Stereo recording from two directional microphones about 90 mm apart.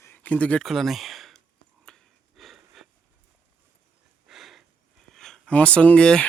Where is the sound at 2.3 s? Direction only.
Centre (ahead or behind).